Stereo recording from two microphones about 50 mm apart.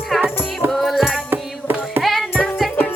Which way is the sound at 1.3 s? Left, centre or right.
Right.